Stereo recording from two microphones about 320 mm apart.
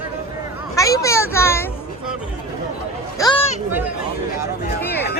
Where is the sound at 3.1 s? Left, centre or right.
Centre.